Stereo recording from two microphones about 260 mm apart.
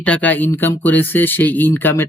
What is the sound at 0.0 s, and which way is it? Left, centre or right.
Speech, centre.